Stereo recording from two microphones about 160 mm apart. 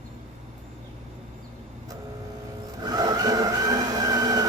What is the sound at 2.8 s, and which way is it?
Vehicle, 25° right (ahead or behind).